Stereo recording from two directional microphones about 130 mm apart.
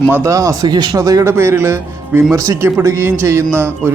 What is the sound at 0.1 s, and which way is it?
Speech, 25° right (ahead or behind).